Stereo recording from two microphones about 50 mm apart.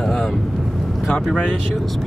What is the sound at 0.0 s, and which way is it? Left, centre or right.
Vehicle, centre.